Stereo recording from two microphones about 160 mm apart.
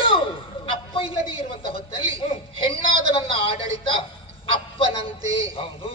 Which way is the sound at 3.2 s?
35° left (ahead or behind).